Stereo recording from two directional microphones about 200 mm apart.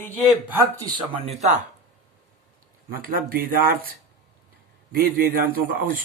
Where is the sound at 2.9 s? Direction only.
45° right (ahead or behind).